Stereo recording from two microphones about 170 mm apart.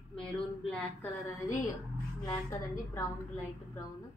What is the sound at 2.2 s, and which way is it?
Speech, 20° left (ahead or behind).